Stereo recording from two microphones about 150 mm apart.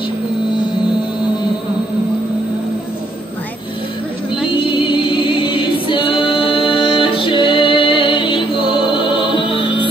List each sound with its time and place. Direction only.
4.5 s a capella: 35° left (ahead or behind)